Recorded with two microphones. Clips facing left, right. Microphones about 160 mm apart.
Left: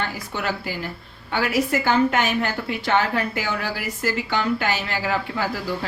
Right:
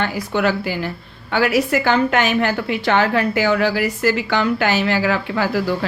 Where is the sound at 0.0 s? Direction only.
85° right.